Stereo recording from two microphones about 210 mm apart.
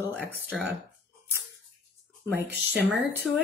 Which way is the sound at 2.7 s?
Centre (ahead or behind).